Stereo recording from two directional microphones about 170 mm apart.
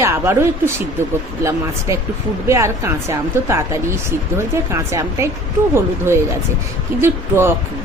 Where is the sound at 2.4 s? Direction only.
15° right (ahead or behind).